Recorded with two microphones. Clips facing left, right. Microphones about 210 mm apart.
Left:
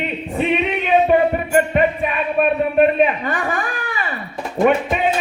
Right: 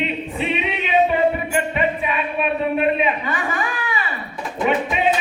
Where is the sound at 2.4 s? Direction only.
50° left (ahead or behind).